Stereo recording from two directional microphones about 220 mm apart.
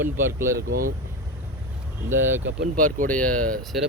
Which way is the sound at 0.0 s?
10° right (ahead or behind).